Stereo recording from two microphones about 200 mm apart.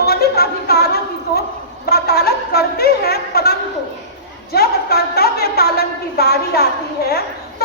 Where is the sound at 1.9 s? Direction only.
50° left (ahead or behind).